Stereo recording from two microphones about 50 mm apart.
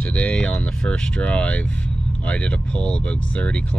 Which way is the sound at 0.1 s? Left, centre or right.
Left.